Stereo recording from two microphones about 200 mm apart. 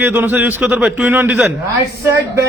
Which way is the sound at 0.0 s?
10° right (ahead or behind).